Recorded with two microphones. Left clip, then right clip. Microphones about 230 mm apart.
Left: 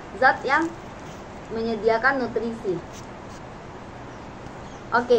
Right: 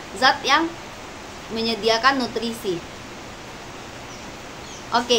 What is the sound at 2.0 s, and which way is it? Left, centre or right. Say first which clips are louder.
Speech: right 3 dB; right.